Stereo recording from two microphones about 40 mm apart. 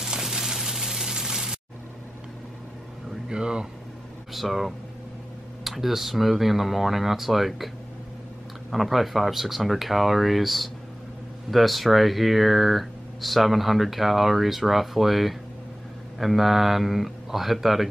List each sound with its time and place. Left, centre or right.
0.0 s a sound: centre
0.6 s water: centre
3.3 s speech: right
4.3 s speech: centre